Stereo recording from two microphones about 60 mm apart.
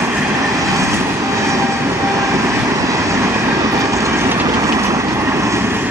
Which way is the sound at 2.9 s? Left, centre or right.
Right.